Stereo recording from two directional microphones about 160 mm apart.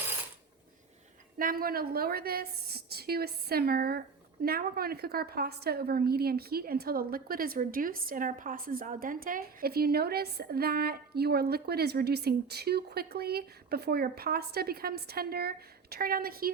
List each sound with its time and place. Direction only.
1.4 s a woman's voice: 65° right (ahead or behind)